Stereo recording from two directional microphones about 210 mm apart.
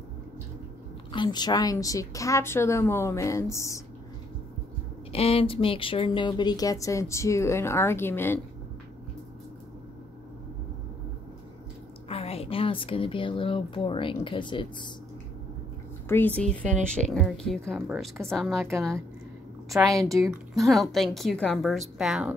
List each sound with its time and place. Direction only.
1.1 s speech: 20° left (ahead or behind)
5.1 s speech: 30° left (ahead or behind); by 8.4 s 10° left (ahead or behind)
12.1 s a woman's voice: 30° left (ahead or behind)
16.1 s a woman's voice: 10° left (ahead or behind)
19.7 s a woman's voice: 15° right (ahead or behind)
20.0 s a woman's voice: centre (ahead or behind)